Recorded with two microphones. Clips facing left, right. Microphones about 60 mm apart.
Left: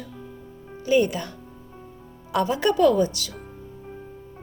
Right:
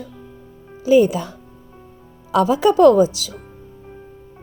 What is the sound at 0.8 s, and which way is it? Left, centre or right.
Speech, right.